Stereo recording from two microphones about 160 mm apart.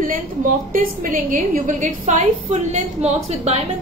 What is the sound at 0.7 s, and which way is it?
A woman's voice, 60° right (ahead or behind).